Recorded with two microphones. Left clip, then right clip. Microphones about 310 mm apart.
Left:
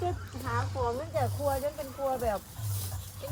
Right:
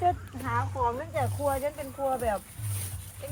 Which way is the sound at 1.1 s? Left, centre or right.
Right.